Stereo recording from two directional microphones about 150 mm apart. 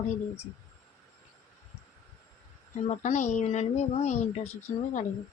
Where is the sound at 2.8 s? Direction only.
50° left (ahead or behind).